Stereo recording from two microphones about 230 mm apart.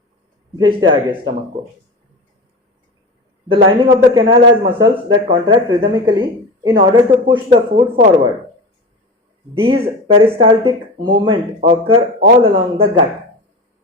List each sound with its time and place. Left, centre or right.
0.6 s speech: centre
3.5 s speech: right
9.6 s speech: right